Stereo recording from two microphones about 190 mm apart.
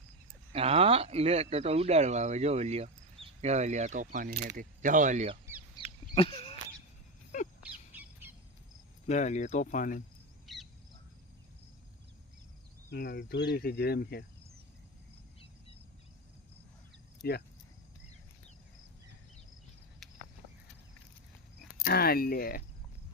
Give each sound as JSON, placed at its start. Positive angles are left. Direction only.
{"t": 0.5, "sound": "speech", "side_deg": -30}
{"t": 5.7, "sound": "a sound", "side_deg": 30}
{"t": 7.6, "sound": "bird", "side_deg": -10}
{"t": 9.0, "sound": "speech", "side_deg": 40}
{"t": 10.4, "sound": "bird", "side_deg": 0}
{"t": 12.9, "sound": "cricket", "side_deg": 60}
{"t": 17.2, "sound": "cricket", "side_deg": 55}
{"t": 21.8, "sound": "speech", "side_deg": 50}